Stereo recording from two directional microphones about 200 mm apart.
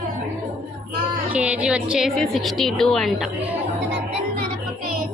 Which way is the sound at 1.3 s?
5° right (ahead or behind).